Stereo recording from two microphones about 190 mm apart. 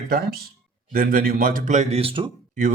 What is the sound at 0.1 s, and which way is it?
Speech, 50° right (ahead or behind).